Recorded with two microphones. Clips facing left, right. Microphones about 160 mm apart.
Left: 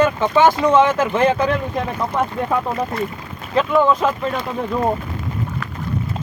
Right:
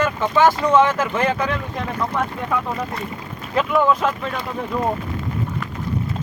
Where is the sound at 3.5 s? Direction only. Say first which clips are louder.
Left 2 dB; centre (ahead or behind).